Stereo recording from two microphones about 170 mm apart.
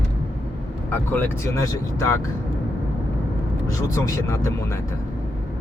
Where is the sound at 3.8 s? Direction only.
20° left (ahead or behind).